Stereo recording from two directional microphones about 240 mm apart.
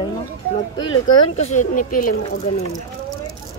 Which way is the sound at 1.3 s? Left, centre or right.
Left.